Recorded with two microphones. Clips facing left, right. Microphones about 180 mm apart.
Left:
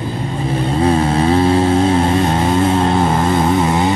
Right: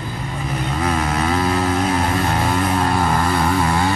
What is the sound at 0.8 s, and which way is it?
Vehicle, 30° left (ahead or behind).